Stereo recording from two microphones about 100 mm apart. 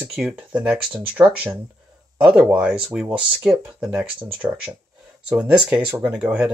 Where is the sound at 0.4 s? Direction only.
15° right (ahead or behind).